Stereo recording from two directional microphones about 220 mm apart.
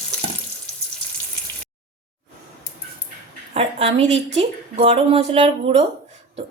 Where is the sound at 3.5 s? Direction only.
30° right (ahead or behind).